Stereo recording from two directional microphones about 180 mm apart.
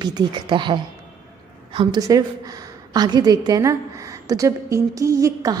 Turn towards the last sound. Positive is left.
turn(degrees=-20)  # may be behind; listen again after turning